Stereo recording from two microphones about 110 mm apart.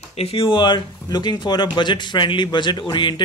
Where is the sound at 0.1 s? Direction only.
60° left (ahead or behind).